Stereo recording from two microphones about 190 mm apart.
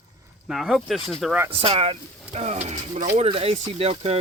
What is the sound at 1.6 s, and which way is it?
Speech, 30° right (ahead or behind).